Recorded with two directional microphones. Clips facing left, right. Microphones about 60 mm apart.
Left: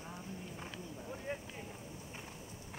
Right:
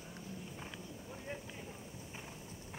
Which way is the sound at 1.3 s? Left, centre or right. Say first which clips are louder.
Left 3 dB; left.